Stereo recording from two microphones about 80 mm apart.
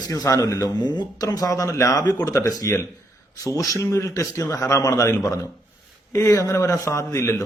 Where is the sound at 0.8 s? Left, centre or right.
Left.